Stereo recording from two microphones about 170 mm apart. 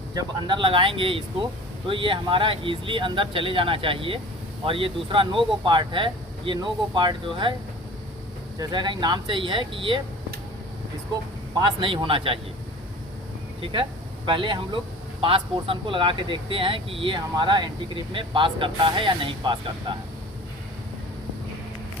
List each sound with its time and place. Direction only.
0.1 s speech: 25° right (ahead or behind)
8.5 s speech: 25° right (ahead or behind)
11.6 s speech: 30° right (ahead or behind)
13.6 s speech: 30° right (ahead or behind)